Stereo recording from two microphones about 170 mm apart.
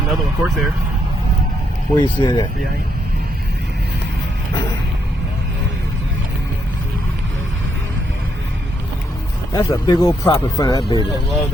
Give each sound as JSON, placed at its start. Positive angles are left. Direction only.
{"t": 0.1, "sound": "speech", "side_deg": 0}
{"t": 2.0, "sound": "speech", "side_deg": 25}
{"t": 9.5, "sound": "speech", "side_deg": 15}
{"t": 10.8, "sound": "speech", "side_deg": 35}